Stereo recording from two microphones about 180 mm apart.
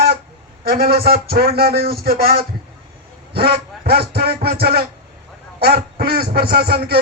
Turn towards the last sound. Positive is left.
turn(degrees=-60)  # may be behind; listen again after turning